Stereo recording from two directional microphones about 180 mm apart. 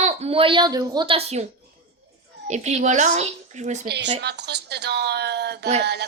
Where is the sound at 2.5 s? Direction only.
40° right (ahead or behind).